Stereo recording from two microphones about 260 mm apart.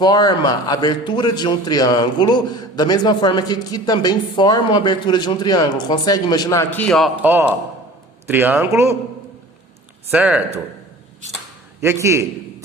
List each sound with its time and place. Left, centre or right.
0.0 s a man's voice: centre
10.1 s speech: centre
11.8 s a man's voice: centre